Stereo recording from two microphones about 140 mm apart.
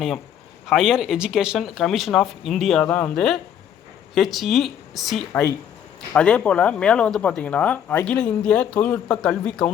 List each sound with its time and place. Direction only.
0.7 s speech: 5° right (ahead or behind)
5.3 s speech: 20° left (ahead or behind)
6.1 s speech: 5° left (ahead or behind)